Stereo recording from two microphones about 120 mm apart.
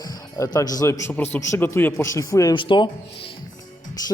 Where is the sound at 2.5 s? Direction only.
40° left (ahead or behind).